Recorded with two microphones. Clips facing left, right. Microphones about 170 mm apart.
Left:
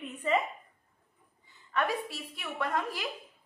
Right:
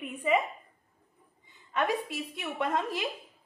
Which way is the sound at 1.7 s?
20° right (ahead or behind).